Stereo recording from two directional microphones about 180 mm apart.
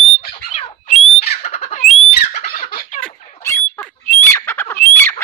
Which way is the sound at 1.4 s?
40° left (ahead or behind).